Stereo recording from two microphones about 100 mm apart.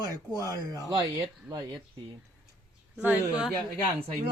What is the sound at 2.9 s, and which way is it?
Speech, 15° right (ahead or behind).